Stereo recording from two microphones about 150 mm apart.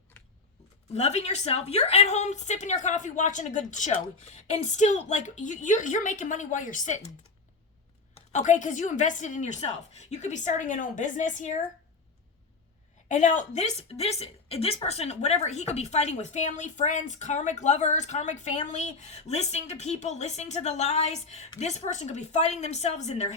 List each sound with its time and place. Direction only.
0.9 s a woman's voice: 45° left (ahead or behind)
8.1 s a woman's voice: 55° left (ahead or behind)
13.1 s a woman's voice: 55° left (ahead or behind)